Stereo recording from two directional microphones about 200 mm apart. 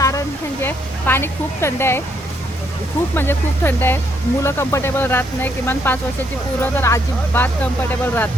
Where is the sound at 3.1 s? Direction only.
10° left (ahead or behind).